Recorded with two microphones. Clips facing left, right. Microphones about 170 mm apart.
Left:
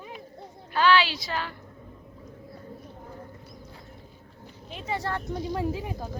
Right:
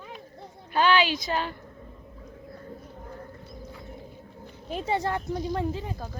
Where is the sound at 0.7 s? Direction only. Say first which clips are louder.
Even; 20° right (ahead or behind).